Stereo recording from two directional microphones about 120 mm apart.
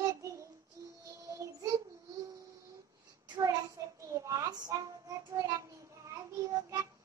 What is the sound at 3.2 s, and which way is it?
Child singing, 35° right (ahead or behind).